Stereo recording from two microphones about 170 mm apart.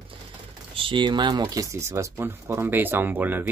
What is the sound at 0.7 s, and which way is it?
Speech, 30° right (ahead or behind).